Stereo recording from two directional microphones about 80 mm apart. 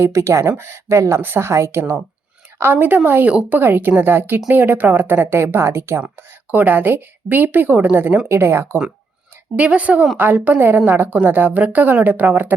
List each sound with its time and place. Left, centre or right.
0.0 s a woman's voice: right
6.1 s a woman's voice: right
9.6 s a woman's voice: centre